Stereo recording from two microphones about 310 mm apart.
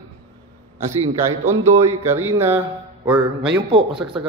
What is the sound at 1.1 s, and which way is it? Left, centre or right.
A man's voice, centre.